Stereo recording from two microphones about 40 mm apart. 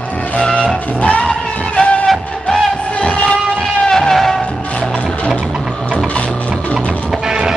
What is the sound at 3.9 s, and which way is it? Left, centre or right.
Music, centre.